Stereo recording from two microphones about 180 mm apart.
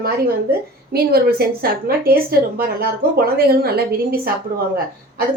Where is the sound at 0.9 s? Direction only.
60° right (ahead or behind).